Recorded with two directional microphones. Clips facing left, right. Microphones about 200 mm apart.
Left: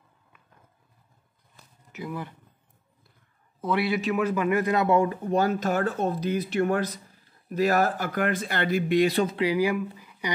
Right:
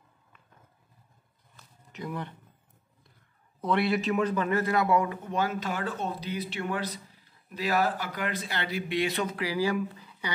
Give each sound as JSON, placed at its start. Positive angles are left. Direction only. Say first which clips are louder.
{"t": 1.9, "sound": "speech", "louder": "left 1 dB", "side_deg": 5}
{"t": 3.6, "sound": "a man's voice", "louder": "left 1 dB", "side_deg": 0}
{"t": 9.8, "sound": "a sound", "louder": "left 1 dB", "side_deg": 10}